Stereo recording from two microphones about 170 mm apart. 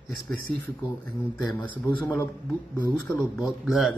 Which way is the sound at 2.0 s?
10° left (ahead or behind).